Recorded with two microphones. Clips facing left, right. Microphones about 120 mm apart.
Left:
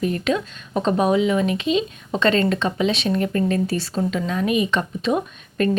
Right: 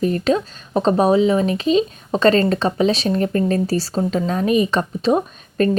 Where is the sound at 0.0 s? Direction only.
35° right (ahead or behind).